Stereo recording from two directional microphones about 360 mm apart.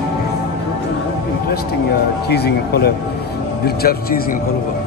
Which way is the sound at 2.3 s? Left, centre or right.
Left.